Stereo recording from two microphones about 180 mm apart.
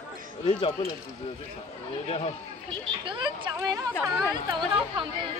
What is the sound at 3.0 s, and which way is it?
Speech, 25° right (ahead or behind).